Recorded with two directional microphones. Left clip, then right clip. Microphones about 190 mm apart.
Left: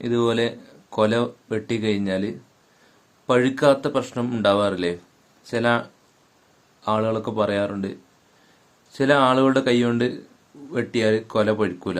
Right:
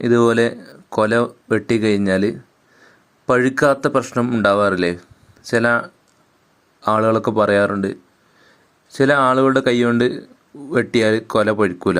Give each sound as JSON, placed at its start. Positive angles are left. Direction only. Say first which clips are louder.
{"t": 0.0, "sound": "speech", "louder": "right 7 dB", "side_deg": -40}
{"t": 6.8, "sound": "speech", "louder": "right 7 dB", "side_deg": -40}